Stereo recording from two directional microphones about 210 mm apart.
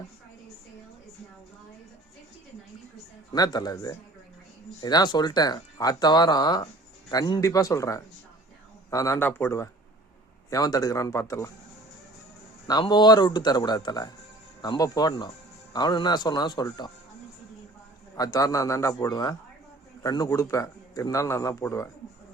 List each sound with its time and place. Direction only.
3.3 s speech: 20° left (ahead or behind)
12.6 s speech: 20° left (ahead or behind)
18.2 s speech: 15° left (ahead or behind)